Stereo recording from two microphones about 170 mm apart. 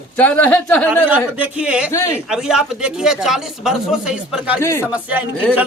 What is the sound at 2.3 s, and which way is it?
Speech, 5° right (ahead or behind).